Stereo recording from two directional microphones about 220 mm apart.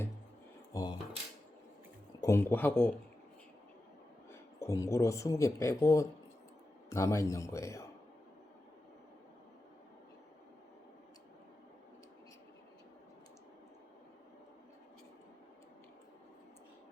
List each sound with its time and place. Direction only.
0.7 s coin: 15° left (ahead or behind)
2.2 s a man's voice: 10° left (ahead or behind)
4.3 s a man's voice: 15° left (ahead or behind)